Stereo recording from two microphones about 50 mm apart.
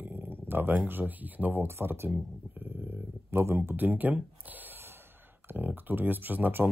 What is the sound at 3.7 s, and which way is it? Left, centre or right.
Speech, right.